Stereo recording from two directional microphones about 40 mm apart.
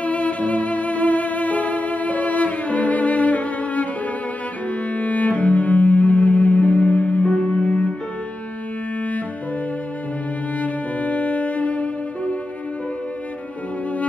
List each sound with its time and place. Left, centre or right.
0.0 s music: left
4.9 s cello: left
10.6 s music: left